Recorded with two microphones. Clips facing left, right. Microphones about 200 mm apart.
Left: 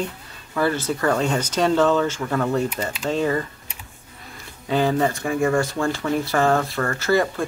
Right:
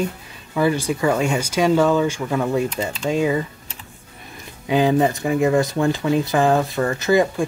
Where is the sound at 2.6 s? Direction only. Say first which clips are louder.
Right 2 dB; 10° left (ahead or behind).